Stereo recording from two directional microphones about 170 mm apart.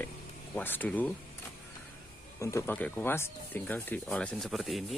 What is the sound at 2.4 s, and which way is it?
Speech, 15° left (ahead or behind).